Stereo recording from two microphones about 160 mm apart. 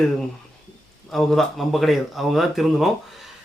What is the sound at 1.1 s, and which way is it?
Speech, 5° left (ahead or behind).